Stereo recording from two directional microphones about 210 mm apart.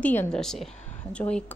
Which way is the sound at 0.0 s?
5° left (ahead or behind).